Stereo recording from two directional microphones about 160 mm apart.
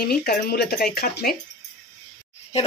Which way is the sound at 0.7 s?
65° left (ahead or behind).